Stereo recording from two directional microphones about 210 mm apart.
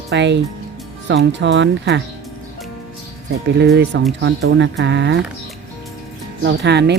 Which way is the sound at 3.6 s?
55° right (ahead or behind).